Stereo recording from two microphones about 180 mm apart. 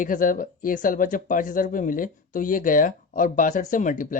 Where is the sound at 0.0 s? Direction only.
50° left (ahead or behind).